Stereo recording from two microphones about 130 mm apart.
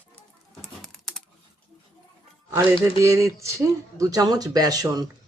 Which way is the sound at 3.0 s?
20° right (ahead or behind).